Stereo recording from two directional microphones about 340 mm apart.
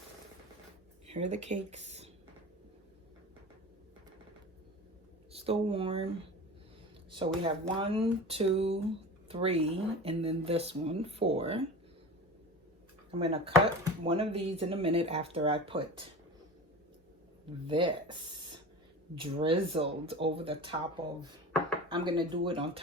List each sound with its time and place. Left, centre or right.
1.0 s speech: centre
5.3 s speech: centre
7.1 s speech: centre
13.1 s speech: centre
17.7 s speech: centre